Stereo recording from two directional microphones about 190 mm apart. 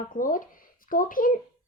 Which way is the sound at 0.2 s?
45° left (ahead or behind).